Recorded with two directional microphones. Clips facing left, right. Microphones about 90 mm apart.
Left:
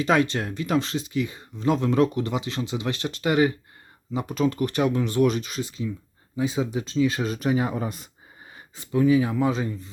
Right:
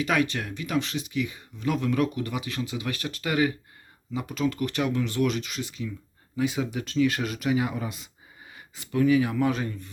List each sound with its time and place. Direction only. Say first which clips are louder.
0.0 s speech: left 4 dB; 30° left (ahead or behind)
7.3 s speech: left 2 dB; 35° left (ahead or behind)
8.5 s a sound: left 1 dB; 35° left (ahead or behind)
8.9 s speech: left 2 dB; 25° left (ahead or behind)